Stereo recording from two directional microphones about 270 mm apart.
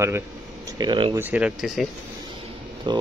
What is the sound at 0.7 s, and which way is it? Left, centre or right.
Speech, centre.